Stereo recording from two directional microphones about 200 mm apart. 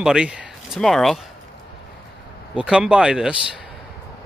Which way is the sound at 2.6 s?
5° right (ahead or behind).